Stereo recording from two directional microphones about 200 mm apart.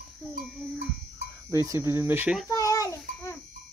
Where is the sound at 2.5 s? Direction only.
15° left (ahead or behind).